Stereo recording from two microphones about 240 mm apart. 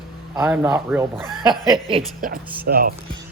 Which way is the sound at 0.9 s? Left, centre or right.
Centre.